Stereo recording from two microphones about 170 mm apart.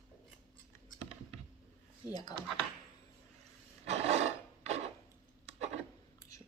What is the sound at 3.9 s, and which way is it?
Filing, 40° right (ahead or behind).